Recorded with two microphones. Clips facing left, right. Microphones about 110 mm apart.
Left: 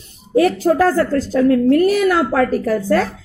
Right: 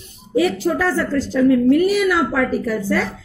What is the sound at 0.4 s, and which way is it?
A woman's voice, 45° left (ahead or behind).